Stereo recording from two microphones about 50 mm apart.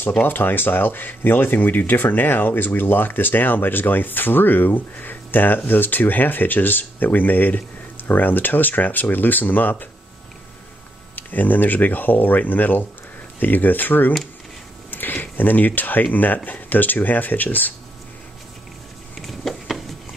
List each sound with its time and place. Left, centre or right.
0.2 s speech: left
11.1 s speech: left
19.2 s a sound: centre